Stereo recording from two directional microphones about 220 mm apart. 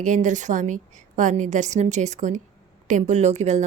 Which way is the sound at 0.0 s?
35° right (ahead or behind).